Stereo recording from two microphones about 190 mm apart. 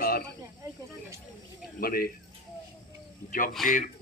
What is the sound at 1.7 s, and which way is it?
Speech, 50° left (ahead or behind).